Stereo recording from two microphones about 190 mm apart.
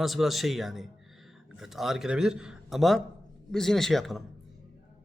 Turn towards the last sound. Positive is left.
turn(degrees=0)  # may be behind; listen again after turning